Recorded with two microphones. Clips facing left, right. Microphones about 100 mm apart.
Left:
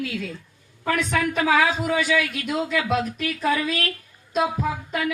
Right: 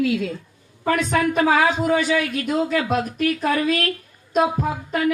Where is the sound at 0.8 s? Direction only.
35° right (ahead or behind).